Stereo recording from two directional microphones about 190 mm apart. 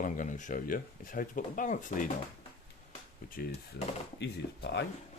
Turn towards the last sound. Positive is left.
turn(degrees=65)  # may be behind; listen again after turning